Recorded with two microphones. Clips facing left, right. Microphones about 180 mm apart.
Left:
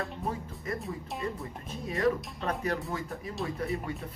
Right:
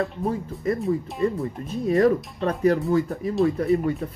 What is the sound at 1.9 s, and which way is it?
Speech, 35° right (ahead or behind).